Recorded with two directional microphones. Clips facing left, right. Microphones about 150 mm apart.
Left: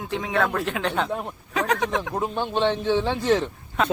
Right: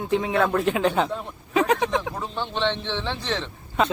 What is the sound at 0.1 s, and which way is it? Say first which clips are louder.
Speech: right 3 dB; centre (ahead or behind).